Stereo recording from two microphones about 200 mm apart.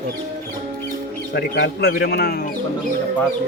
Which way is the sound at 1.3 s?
50° left (ahead or behind).